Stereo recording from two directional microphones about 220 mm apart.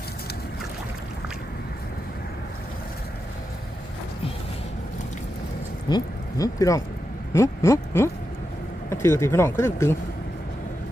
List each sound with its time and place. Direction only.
5.9 s speech: 15° left (ahead or behind)